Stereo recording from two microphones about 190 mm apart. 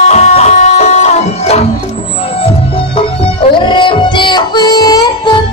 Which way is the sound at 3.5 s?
25° left (ahead or behind).